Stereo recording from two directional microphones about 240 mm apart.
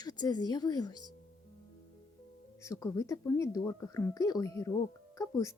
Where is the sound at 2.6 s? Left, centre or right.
Centre.